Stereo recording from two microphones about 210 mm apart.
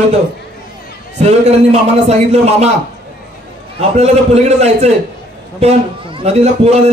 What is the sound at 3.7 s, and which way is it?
A man's voice, 30° right (ahead or behind).